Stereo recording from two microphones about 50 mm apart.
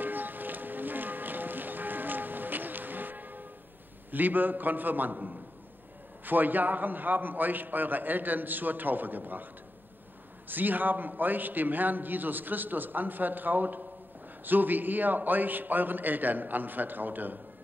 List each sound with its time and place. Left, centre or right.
0.0 s music: right
4.1 s a man's voice: right
10.5 s a man's voice: right